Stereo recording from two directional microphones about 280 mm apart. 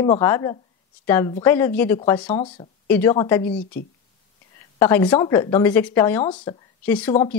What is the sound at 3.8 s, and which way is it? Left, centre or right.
Speech, left.